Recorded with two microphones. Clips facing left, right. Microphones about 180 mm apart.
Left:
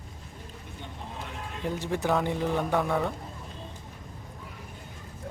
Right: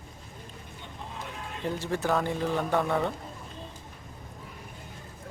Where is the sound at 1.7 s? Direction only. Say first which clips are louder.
Left 1 dB; 15° left (ahead or behind).